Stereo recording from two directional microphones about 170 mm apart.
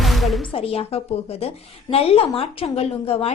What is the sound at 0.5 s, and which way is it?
Speech, 35° left (ahead or behind).